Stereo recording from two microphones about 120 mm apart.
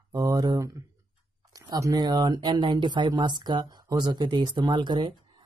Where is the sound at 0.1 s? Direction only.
30° right (ahead or behind).